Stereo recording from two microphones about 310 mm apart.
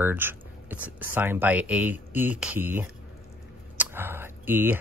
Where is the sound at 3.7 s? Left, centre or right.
Centre.